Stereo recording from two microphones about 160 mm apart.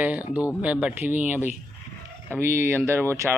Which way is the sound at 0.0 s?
10° right (ahead or behind).